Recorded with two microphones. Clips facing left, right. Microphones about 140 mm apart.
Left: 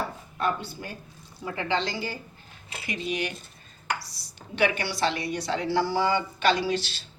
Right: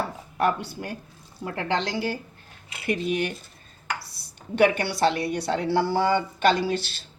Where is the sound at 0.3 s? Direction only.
70° right (ahead or behind).